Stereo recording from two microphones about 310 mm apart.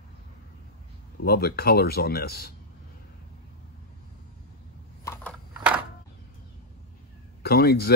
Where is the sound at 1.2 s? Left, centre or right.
Left.